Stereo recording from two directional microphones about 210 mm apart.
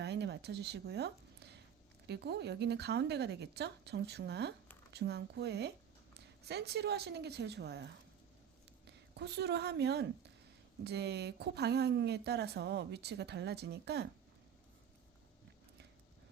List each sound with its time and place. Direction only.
0.0 s a sound: 55° right (ahead or behind)
2.0 s speech: 55° right (ahead or behind)
9.1 s speech: 50° right (ahead or behind)